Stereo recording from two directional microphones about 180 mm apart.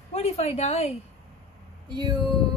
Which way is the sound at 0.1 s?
35° left (ahead or behind).